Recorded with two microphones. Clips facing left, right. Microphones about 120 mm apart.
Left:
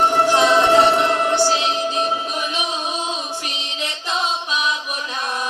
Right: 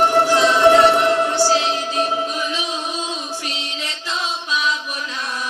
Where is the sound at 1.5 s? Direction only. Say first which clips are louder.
Right 1 dB; 20° left (ahead or behind).